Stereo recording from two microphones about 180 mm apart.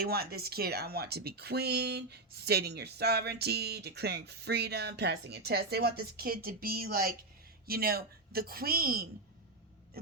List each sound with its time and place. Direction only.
0.0 s speech: 60° right (ahead or behind)